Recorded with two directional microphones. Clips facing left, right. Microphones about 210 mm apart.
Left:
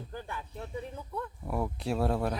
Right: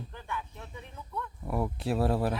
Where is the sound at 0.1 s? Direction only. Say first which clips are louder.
Even; 35° left (ahead or behind).